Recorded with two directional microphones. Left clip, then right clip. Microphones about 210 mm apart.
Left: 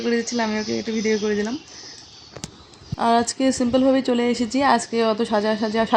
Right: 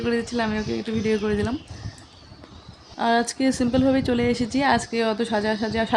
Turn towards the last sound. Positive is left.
turn(degrees=5)  # may be behind; listen again after turning